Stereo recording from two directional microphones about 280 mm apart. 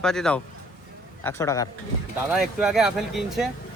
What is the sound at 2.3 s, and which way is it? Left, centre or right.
Speech, centre.